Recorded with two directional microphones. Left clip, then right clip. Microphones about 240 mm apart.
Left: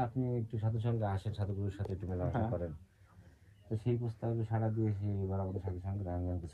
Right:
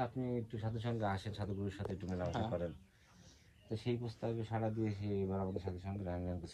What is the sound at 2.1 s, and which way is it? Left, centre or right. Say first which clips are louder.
Speech: left 3 dB; centre.